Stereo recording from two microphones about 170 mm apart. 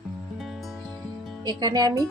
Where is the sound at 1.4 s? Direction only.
25° right (ahead or behind).